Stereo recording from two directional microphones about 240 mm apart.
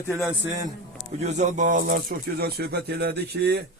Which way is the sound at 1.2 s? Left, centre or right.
Right.